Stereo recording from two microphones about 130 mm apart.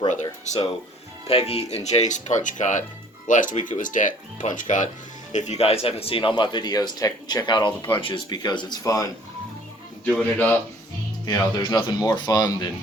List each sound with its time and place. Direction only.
0.1 s speech: 65° left (ahead or behind)
1.3 s speech: 50° left (ahead or behind)
1.7 s speech: 60° left (ahead or behind)
5.3 s speech: 60° left (ahead or behind); by 9.0 s 25° left (ahead or behind)
10.1 s speech: 10° left (ahead or behind)
11.3 s speech: 30° left (ahead or behind)